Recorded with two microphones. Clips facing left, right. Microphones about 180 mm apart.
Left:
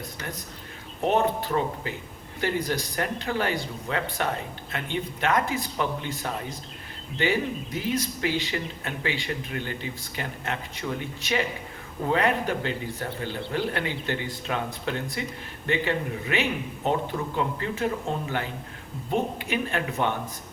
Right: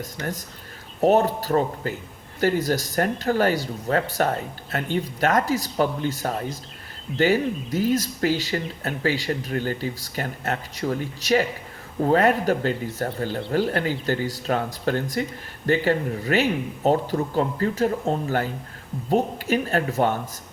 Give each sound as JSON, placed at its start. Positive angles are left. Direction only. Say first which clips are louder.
{"t": 1.0, "sound": "speech", "louder": "right 5 dB", "side_deg": -40}